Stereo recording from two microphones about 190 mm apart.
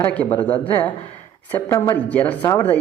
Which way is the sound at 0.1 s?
10° left (ahead or behind).